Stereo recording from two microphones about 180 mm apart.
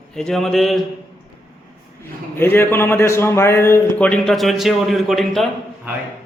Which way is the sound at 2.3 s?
10° left (ahead or behind).